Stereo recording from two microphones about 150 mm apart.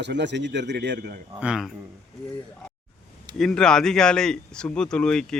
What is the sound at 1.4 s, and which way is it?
Speech, 5° right (ahead or behind).